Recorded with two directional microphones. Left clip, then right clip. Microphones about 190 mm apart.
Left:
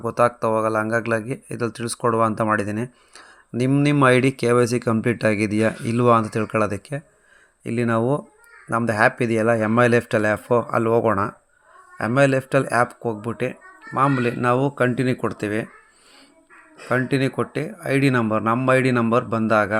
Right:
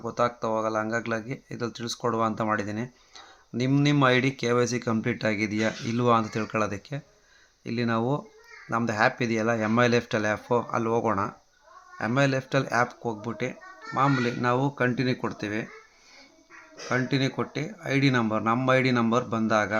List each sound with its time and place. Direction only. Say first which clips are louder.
0.0 s speech: left 7 dB; 40° left (ahead or behind)
16.9 s speech: left 6 dB; 30° left (ahead or behind)